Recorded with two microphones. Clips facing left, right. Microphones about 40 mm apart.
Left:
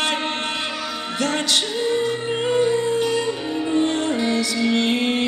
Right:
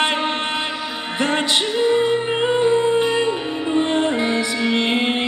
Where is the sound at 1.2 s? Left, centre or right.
Right.